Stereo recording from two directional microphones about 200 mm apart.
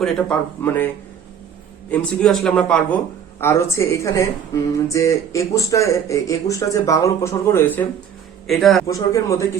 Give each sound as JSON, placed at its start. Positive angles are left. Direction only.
{"t": 0.0, "sound": "speech", "side_deg": 5}
{"t": 1.9, "sound": "speech", "side_deg": 5}
{"t": 8.4, "sound": "speech", "side_deg": 0}
{"t": 8.9, "sound": "speech", "side_deg": 15}